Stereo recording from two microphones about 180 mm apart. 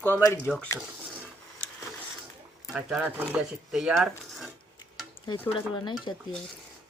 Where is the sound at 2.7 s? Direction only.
5° right (ahead or behind).